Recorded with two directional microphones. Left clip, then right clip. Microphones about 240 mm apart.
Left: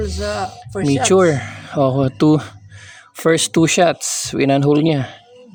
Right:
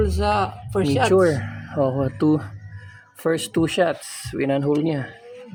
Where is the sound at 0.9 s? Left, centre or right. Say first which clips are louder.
Left 4 dB; left.